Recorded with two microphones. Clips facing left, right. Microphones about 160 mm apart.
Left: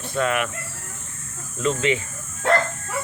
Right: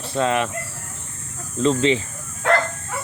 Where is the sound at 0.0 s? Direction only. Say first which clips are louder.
Right 2 dB; 30° right (ahead or behind).